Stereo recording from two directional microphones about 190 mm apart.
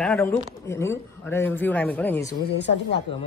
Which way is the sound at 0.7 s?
15° left (ahead or behind).